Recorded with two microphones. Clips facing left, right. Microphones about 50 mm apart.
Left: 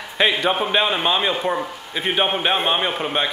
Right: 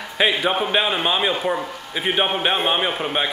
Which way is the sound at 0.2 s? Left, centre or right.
Centre.